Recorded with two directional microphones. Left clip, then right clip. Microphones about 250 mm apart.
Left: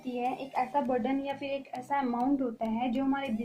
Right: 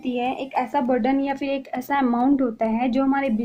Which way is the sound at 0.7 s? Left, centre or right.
Right.